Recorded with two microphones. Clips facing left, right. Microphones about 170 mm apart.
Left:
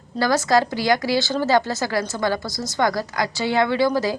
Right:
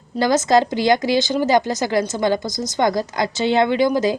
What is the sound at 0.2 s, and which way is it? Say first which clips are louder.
Speech: right 3 dB; 20° right (ahead or behind).